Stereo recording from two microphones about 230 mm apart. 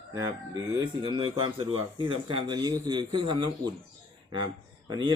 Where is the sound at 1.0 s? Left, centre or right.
Right.